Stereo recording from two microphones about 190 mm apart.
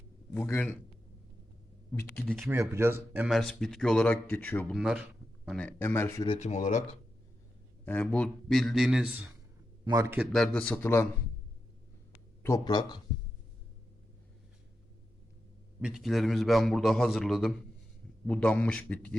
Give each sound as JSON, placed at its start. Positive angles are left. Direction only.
{"t": 0.3, "sound": "a man's voice", "side_deg": 10}
{"t": 1.9, "sound": "a man's voice", "side_deg": 10}
{"t": 2.5, "sound": "speech", "side_deg": -15}
{"t": 4.8, "sound": "a man's voice", "side_deg": -5}
{"t": 6.2, "sound": "speech", "side_deg": 35}
{"t": 7.9, "sound": "speech", "side_deg": 5}
{"t": 9.8, "sound": "a man's voice", "side_deg": -15}
{"t": 10.3, "sound": "a man's voice", "side_deg": 5}
{"t": 12.4, "sound": "speech", "side_deg": 15}
{"t": 15.8, "sound": "a man's voice", "side_deg": -5}